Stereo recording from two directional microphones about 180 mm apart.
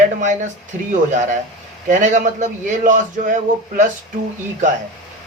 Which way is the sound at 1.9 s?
45° right (ahead or behind).